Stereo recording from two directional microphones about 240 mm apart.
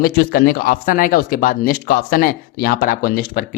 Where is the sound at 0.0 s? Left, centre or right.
Left.